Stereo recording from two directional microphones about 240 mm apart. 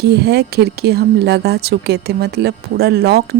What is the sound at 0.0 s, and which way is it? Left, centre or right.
A woman's voice, right.